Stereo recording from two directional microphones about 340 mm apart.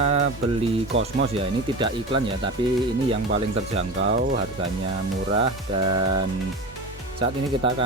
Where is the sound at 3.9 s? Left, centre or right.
Right.